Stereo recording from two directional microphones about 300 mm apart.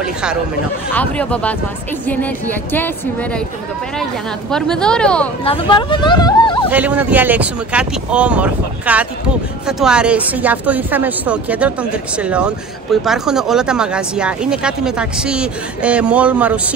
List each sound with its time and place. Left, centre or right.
0.0 s speech: centre
2.7 s speech: centre
4.5 s speech: centre
5.4 s speech: centre
6.7 s speech: centre